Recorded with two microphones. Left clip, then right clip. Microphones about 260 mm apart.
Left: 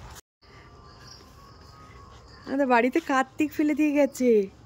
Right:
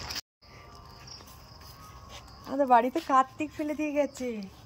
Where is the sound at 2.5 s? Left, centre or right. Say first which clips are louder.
Left 1 dB; centre.